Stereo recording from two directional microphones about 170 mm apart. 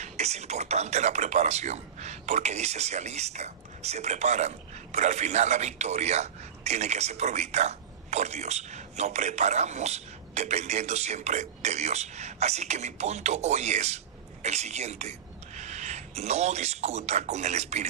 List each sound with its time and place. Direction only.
0.0 s speech: 40° right (ahead or behind)